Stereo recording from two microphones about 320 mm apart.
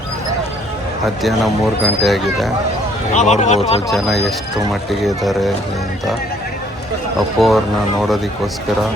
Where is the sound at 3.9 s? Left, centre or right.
Centre.